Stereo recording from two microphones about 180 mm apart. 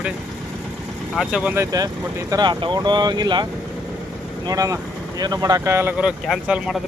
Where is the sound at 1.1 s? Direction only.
5° right (ahead or behind); by 3.4 s 25° right (ahead or behind).